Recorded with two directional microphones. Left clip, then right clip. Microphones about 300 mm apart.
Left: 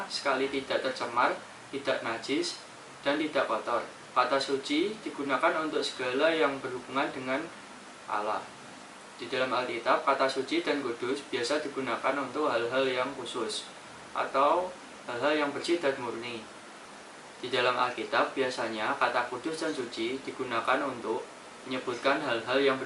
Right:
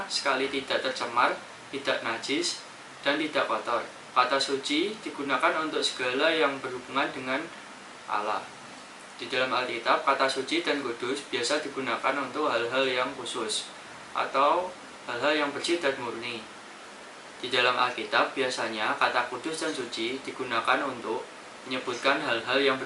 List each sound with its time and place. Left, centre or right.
0.2 s speech: centre
17.4 s speech: centre